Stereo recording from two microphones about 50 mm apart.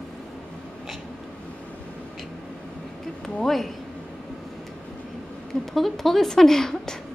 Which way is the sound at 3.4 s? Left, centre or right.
Centre.